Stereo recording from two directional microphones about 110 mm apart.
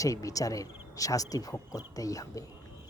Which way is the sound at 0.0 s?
30° left (ahead or behind).